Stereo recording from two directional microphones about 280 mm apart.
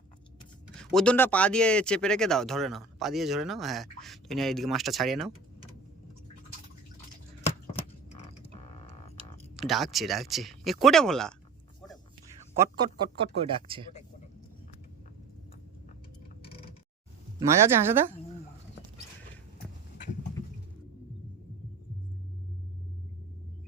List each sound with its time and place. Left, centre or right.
0.8 s speech: centre
9.6 s speech: centre
12.5 s speech: centre
17.7 s speech: centre